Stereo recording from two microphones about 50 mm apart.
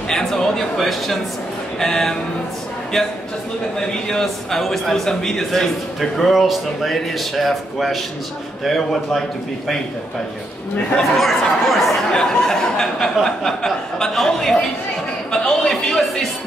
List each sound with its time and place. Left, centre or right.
0.1 s a man's voice: centre
1.8 s a sound: centre
4.1 s a man's voice: centre
11.0 s a man's voice: centre
12.1 s a sound: centre
15.3 s music: centre